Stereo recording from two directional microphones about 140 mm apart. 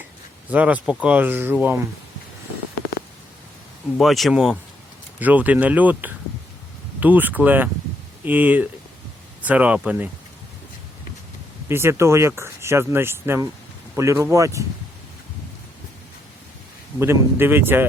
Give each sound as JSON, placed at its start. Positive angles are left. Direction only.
{"t": 0.5, "sound": "speech", "side_deg": -10}
{"t": 3.9, "sound": "speech", "side_deg": 0}
{"t": 11.7, "sound": "speech", "side_deg": -20}
{"t": 17.0, "sound": "speech", "side_deg": -15}